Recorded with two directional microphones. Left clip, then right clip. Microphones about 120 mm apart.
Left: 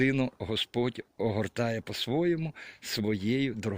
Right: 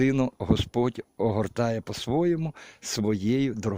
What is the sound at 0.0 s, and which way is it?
Speech, 45° right (ahead or behind).